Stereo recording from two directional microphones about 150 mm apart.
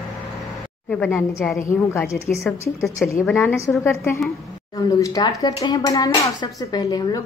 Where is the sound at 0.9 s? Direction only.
10° left (ahead or behind).